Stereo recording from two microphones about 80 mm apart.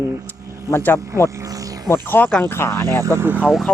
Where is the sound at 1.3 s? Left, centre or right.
Right.